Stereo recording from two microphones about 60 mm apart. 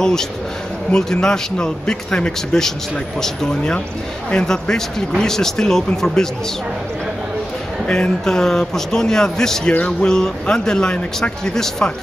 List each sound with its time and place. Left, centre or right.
0.0 s speech: centre
7.8 s speech: centre